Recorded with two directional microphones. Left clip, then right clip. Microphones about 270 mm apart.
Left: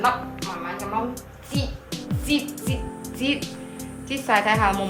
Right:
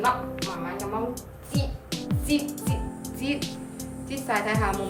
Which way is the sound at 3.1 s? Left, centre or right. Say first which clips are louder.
Left 5 dB; centre.